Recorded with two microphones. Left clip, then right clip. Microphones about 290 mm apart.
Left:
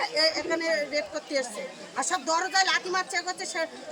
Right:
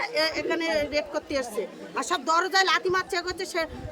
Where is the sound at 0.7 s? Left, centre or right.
Right.